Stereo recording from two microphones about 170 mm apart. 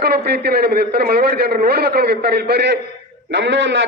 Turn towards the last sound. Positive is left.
turn(degrees=-90)